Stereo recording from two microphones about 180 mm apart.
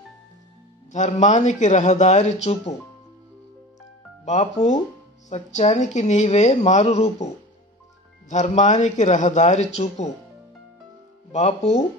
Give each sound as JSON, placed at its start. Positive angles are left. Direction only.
{"t": 0.9, "sound": "speech", "side_deg": 40}
{"t": 4.2, "sound": "speech", "side_deg": 40}
{"t": 8.3, "sound": "speech", "side_deg": 40}
{"t": 11.3, "sound": "speech", "side_deg": 40}